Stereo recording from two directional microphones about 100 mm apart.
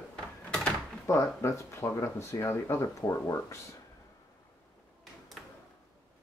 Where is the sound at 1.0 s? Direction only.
30° left (ahead or behind).